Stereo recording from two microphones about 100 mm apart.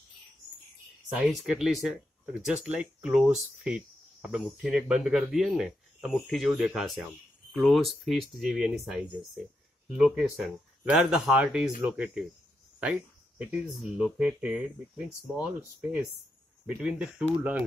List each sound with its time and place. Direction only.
1.2 s speech: centre (ahead or behind)
12.8 s a sound: 15° right (ahead or behind)
13.7 s speech: 5° right (ahead or behind)